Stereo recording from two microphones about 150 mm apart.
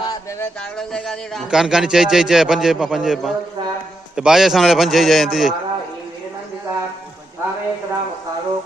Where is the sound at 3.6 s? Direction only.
30° right (ahead or behind).